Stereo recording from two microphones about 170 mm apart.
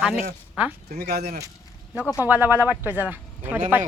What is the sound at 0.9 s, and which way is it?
Speech, 70° right (ahead or behind).